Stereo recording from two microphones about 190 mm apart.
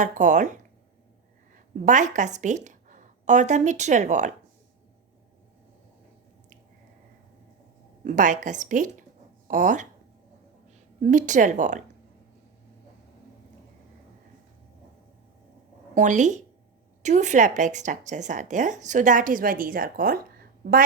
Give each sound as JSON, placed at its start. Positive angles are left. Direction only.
{"t": 0.0, "sound": "a woman's voice", "side_deg": -40}
{"t": 8.0, "sound": "a woman's voice", "side_deg": -40}
{"t": 11.0, "sound": "a woman's voice", "side_deg": -40}
{"t": 16.0, "sound": "a woman's voice", "side_deg": -40}